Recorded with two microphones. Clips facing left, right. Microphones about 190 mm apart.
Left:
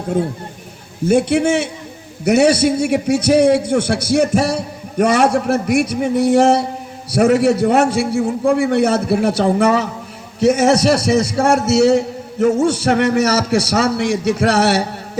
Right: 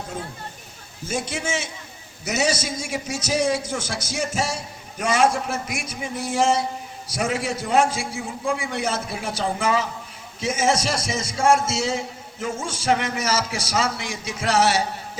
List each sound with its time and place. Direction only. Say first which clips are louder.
1.0 s a man's voice: left 14 dB; 65° left (ahead or behind)